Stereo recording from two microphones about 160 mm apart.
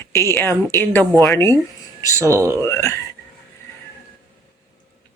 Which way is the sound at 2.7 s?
15° left (ahead or behind).